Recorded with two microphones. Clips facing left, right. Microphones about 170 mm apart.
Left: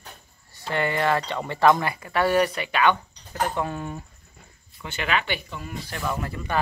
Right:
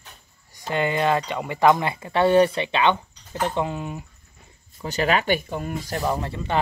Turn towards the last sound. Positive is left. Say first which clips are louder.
# right 4 dB
turn(degrees=-25)  # may be behind; listen again after turning